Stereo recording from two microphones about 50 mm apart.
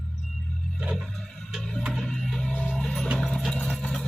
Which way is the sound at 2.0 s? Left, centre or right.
Centre.